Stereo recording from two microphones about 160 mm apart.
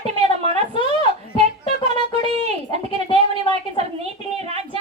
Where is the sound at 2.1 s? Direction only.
40° right (ahead or behind).